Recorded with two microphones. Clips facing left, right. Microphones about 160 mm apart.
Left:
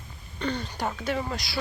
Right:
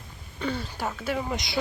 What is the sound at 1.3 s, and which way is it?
Speech, 20° right (ahead or behind).